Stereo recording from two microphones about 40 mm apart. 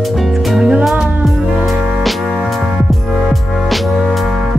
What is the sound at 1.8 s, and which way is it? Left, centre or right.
Music, centre.